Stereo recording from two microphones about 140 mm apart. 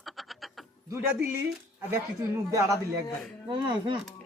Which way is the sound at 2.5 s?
25° right (ahead or behind).